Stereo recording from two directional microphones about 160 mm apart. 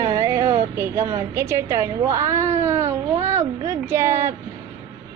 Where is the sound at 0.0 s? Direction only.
20° right (ahead or behind).